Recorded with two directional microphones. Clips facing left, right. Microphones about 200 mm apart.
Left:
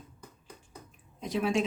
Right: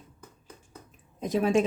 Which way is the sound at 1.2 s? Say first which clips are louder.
Right 5 dB; 45° right (ahead or behind).